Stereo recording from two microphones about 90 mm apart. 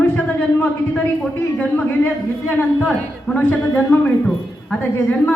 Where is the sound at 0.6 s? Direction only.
15° left (ahead or behind).